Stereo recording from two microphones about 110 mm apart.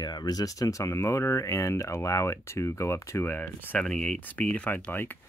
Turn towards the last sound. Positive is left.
turn(degrees=15)  # may be behind; listen again after turning